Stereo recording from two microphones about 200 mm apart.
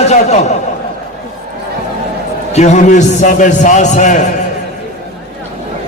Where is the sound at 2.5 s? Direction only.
35° left (ahead or behind).